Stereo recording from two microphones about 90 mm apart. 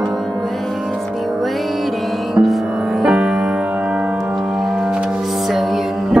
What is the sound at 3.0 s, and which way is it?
Music, 5° right (ahead or behind).